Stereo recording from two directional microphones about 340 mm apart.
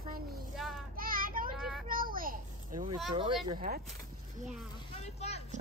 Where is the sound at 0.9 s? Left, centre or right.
Right.